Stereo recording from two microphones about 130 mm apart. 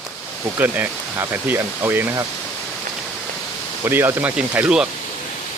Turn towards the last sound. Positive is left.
turn(degrees=-5)  # may be behind; listen again after turning